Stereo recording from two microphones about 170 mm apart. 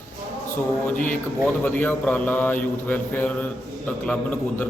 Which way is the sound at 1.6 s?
10° left (ahead or behind).